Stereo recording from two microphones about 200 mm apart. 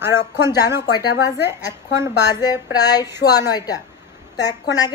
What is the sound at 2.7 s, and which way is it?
A woman's voice, 20° left (ahead or behind).